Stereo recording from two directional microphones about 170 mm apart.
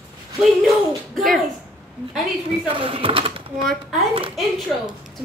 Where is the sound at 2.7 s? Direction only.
30° right (ahead or behind).